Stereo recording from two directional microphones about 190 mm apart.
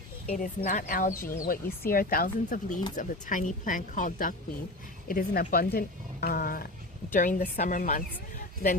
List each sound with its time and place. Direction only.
0.3 s speech: 45° left (ahead or behind)